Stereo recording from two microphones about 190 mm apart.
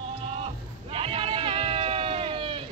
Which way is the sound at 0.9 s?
30° right (ahead or behind).